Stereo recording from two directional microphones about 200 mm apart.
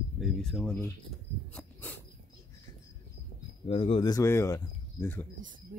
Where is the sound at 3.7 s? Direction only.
30° left (ahead or behind); by 5.2 s 10° left (ahead or behind).